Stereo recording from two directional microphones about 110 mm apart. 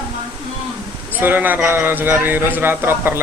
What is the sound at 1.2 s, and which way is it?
Speech, 15° right (ahead or behind).